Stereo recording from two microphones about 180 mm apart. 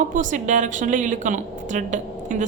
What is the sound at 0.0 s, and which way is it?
A woman's voice, 45° right (ahead or behind).